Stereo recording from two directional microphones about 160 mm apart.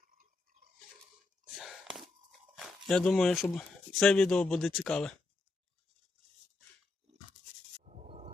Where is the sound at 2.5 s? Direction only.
Centre (ahead or behind).